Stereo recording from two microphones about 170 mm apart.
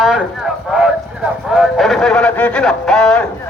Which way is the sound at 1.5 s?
Centre (ahead or behind).